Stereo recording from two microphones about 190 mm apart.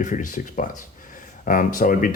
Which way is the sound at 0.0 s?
40° left (ahead or behind).